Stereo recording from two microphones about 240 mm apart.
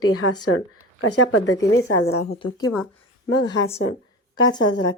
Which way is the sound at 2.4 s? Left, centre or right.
Centre.